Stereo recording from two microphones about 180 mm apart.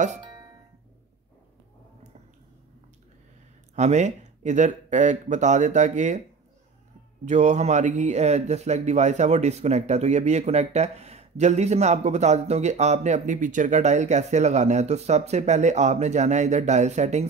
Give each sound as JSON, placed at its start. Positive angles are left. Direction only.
{"t": 3.7, "sound": "speech", "side_deg": -40}
{"t": 7.2, "sound": "speech", "side_deg": -40}